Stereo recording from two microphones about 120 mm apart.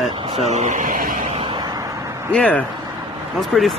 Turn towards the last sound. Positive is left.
turn(degrees=5)  # may be behind; listen again after turning